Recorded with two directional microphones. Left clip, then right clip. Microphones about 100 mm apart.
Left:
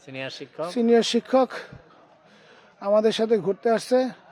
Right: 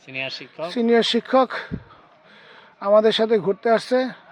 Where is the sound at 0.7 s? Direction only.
10° left (ahead or behind).